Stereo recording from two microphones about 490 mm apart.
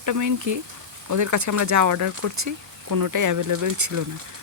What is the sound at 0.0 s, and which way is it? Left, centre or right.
Speech, right.